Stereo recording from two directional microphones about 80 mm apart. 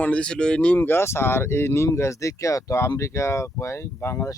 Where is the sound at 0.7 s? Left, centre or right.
Left.